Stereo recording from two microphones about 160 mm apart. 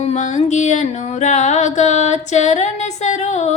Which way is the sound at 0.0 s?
45° left (ahead or behind).